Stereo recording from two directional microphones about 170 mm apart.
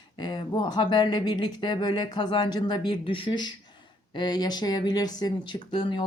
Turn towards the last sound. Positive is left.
turn(degrees=25)  # may be behind; listen again after turning